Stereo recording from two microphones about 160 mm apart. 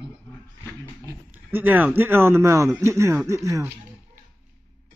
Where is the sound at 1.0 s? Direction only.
15° right (ahead or behind).